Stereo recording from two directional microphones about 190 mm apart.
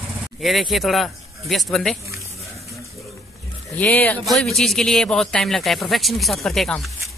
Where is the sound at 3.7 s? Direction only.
10° left (ahead or behind).